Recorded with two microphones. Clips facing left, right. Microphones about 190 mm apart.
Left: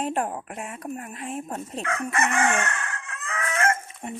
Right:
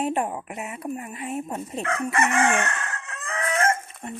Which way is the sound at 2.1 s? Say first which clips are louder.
Right 2 dB; 25° right (ahead or behind).